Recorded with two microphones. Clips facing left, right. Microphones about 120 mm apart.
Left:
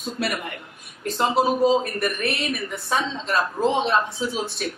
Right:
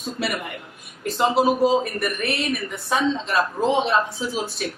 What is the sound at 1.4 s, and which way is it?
Speech, centre (ahead or behind).